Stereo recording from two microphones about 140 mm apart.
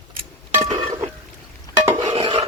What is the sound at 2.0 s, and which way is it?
Stir, 45° right (ahead or behind).